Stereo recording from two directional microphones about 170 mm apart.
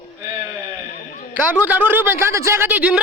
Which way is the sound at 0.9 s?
50° left (ahead or behind).